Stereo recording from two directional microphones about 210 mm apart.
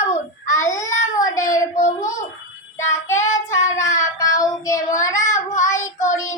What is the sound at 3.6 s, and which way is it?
Child singing, 15° left (ahead or behind).